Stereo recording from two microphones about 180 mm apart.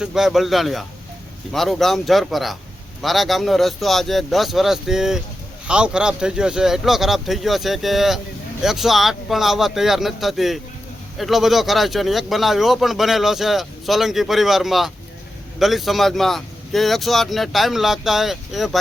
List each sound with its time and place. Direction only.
0.0 s speech: centre (ahead or behind)